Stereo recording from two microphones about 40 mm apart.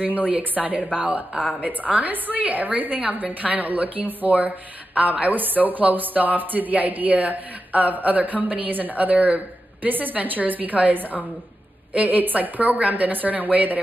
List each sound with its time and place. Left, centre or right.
0.3 s a woman's voice: right